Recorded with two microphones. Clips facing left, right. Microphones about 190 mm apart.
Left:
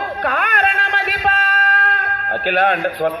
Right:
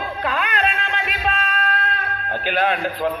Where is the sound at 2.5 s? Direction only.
60° left (ahead or behind).